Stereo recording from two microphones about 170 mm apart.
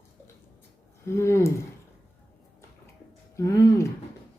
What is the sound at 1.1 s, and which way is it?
Speech, 15° left (ahead or behind).